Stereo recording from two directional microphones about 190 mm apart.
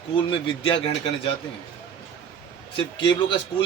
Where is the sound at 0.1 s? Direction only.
25° left (ahead or behind).